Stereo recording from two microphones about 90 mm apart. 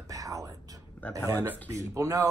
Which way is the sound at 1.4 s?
30° right (ahead or behind).